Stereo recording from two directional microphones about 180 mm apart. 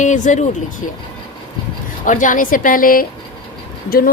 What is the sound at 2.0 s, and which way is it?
Speech, 45° left (ahead or behind).